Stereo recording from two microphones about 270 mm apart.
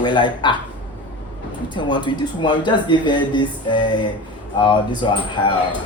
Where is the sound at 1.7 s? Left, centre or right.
Centre.